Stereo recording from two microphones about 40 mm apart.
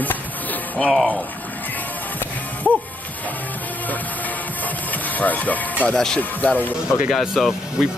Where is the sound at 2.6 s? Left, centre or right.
Left.